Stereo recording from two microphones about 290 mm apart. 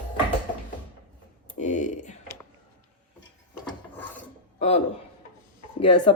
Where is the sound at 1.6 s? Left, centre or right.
Left.